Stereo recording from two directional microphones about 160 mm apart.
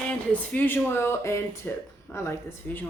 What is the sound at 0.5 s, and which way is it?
A woman's voice, 10° left (ahead or behind).